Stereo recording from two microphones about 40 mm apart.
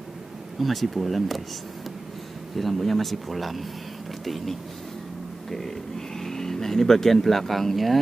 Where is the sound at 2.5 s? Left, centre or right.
Centre.